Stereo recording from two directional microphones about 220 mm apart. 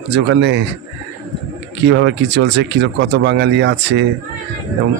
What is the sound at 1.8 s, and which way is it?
A man's voice, 55° right (ahead or behind).